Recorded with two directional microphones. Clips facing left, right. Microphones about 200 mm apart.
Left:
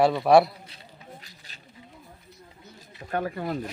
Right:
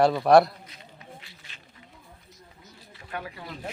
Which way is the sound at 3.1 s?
45° left (ahead or behind).